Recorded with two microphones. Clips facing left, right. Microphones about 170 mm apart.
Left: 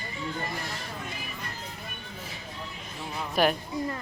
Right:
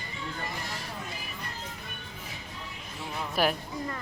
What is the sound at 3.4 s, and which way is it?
Speech, 5° right (ahead or behind).